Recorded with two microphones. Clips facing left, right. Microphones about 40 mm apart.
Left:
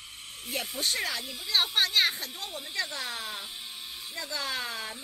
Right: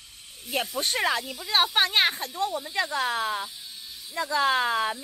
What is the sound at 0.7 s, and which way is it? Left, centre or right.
A woman's voice, right.